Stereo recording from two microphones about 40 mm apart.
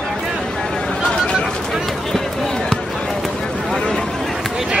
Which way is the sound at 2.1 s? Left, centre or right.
Centre.